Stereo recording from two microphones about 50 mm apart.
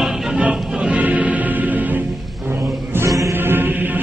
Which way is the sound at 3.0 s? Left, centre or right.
Right.